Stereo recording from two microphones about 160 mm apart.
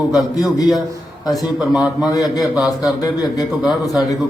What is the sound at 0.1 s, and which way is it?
A man's voice, centre (ahead or behind).